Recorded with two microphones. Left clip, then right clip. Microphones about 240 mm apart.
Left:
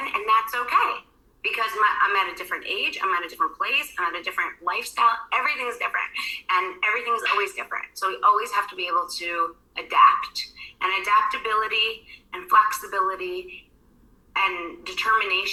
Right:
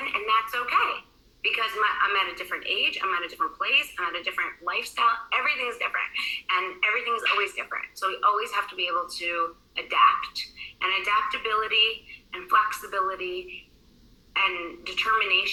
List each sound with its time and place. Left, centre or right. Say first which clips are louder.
0.0 s a woman's voice: left 3 dB; left